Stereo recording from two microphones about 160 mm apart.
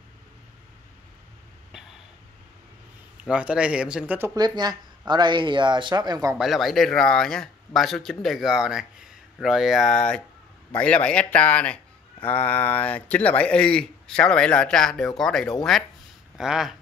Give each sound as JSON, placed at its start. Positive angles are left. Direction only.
{"t": 3.3, "sound": "speech", "side_deg": -5}
{"t": 4.4, "sound": "speech", "side_deg": -25}
{"t": 6.3, "sound": "a man's voice", "side_deg": 0}